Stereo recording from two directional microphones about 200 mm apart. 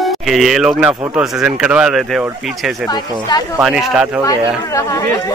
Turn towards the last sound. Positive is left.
turn(degrees=15)  # may be behind; listen again after turning